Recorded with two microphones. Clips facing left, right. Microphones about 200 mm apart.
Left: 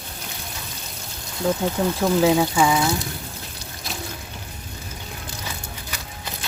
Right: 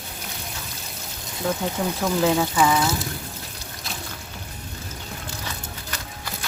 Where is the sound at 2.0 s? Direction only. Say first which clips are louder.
Left 3 dB; 10° left (ahead or behind).